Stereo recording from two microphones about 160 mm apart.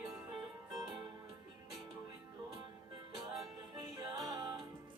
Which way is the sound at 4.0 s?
25° right (ahead or behind).